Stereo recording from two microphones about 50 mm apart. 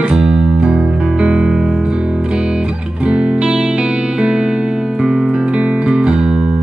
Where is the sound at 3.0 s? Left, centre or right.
Right.